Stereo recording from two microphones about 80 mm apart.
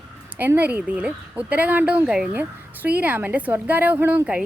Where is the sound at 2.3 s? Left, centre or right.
Right.